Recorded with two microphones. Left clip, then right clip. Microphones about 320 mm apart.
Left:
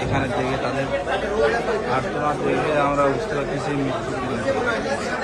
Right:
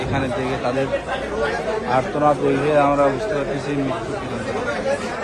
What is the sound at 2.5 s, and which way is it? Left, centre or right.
Speech, centre.